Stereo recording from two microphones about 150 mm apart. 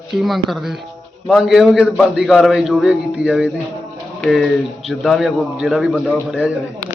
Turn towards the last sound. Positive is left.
turn(degrees=-5)  # may be behind; listen again after turning